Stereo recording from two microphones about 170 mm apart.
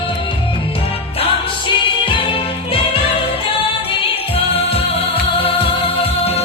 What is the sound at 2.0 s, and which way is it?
Music, 30° left (ahead or behind).